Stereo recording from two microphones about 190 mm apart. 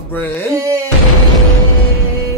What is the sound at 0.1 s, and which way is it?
Speech, 10° left (ahead or behind).